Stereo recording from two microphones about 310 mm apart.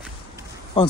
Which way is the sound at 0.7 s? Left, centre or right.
Centre.